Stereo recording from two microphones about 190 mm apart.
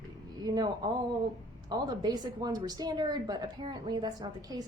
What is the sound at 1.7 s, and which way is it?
A woman's voice, 20° right (ahead or behind).